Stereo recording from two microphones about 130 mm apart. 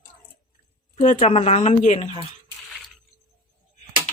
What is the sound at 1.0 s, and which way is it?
Speech, 70° left (ahead or behind).